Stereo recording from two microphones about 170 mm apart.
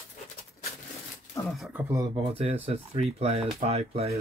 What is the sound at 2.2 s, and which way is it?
Speech, 35° right (ahead or behind).